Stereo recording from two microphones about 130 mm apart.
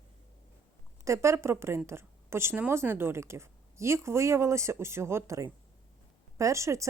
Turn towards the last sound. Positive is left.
turn(degrees=-25)  # may be behind; listen again after turning